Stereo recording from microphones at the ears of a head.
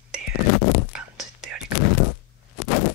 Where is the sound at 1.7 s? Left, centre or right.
Left.